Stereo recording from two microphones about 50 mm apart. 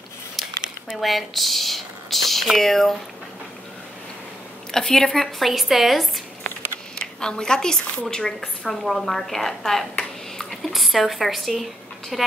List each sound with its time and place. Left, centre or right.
1.0 s speech: centre
4.7 s speech: centre
7.0 s a woman's voice: centre
10.7 s a woman's voice: centre